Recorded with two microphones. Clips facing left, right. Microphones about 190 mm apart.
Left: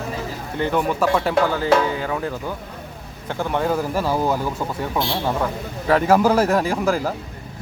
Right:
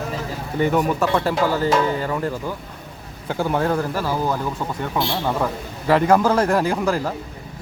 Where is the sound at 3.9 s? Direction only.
15° left (ahead or behind).